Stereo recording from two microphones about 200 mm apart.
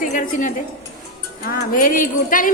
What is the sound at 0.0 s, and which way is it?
Speech, 40° left (ahead or behind).